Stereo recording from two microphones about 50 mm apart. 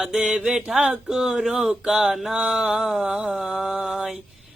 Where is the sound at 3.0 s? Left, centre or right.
Right.